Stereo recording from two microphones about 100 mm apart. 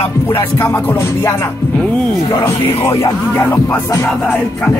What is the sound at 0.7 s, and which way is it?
Music, 20° left (ahead or behind).